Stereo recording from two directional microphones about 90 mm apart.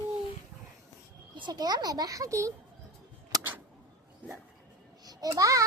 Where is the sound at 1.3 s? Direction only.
55° right (ahead or behind); by 2.5 s 35° right (ahead or behind).